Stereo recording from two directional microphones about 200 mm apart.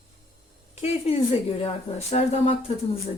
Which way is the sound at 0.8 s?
30° left (ahead or behind).